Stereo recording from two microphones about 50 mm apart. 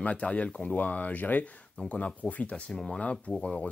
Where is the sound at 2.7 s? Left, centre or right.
Centre.